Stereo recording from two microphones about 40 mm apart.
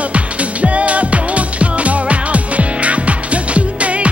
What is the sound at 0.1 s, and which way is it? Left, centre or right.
Music, right.